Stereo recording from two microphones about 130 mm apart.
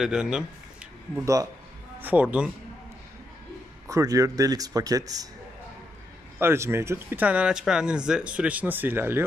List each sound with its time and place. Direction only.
0.0 s a man's voice: 5° right (ahead or behind)
1.2 s speech: 25° right (ahead or behind)
2.0 s speech: 15° right (ahead or behind)
3.8 s speech: 25° right (ahead or behind)
6.4 s speech: 20° right (ahead or behind)